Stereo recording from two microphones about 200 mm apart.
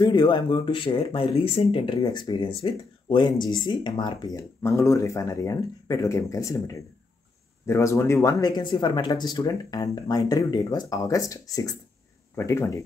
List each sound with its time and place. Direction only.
0.0 s speech: 20° left (ahead or behind)